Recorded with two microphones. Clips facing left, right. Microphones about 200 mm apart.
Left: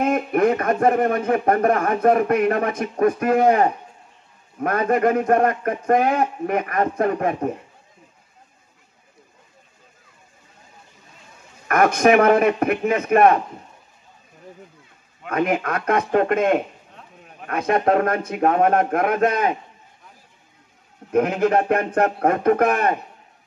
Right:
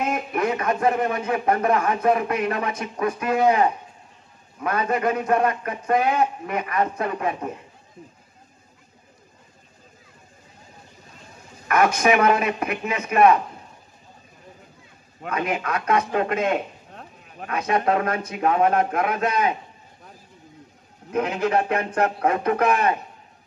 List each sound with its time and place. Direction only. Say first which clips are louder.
0.0 s speech: left 6 dB; 55° left (ahead or behind)
11.6 s speech: left 3 dB; 55° left (ahead or behind)
15.2 s speech: left 4 dB; 50° left (ahead or behind)
16.9 s a sound: right 2 dB; 45° right (ahead or behind)
17.5 s speech: left 3 dB; 50° left (ahead or behind)
21.1 s speech: left 4 dB; 50° left (ahead or behind)